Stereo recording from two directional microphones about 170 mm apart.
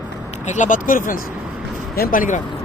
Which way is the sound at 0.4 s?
45° left (ahead or behind).